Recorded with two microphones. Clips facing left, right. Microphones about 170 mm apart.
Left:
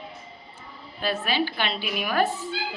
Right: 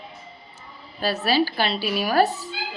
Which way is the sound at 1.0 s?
40° right (ahead or behind).